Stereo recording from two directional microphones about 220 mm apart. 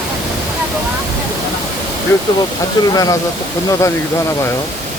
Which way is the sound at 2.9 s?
15° left (ahead or behind).